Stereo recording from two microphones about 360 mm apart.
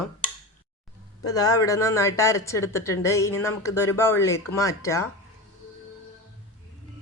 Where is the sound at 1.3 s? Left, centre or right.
Centre.